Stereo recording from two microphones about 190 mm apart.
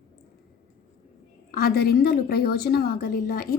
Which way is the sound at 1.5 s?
50° left (ahead or behind).